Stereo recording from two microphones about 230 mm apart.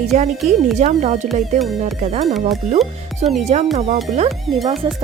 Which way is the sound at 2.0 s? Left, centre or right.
Right.